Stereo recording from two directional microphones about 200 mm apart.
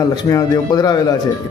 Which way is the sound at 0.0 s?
15° left (ahead or behind).